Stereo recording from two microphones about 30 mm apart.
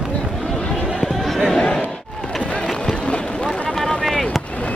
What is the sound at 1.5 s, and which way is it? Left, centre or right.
Chatter, left.